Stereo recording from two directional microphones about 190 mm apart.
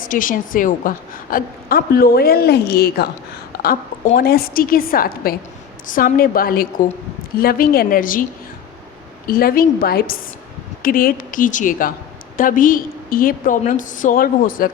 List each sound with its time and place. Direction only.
0.0 s a woman's voice: 45° left (ahead or behind)
9.2 s a woman's voice: 50° left (ahead or behind)